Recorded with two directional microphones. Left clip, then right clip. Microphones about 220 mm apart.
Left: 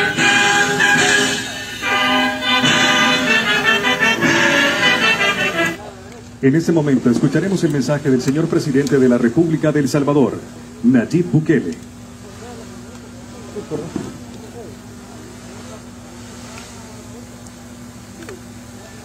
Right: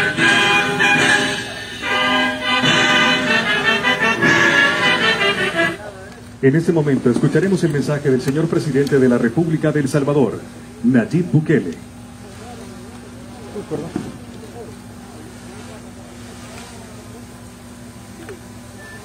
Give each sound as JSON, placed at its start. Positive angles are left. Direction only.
{"t": 0.0, "sound": "music", "side_deg": 50}
{"t": 6.4, "sound": "speech", "side_deg": 50}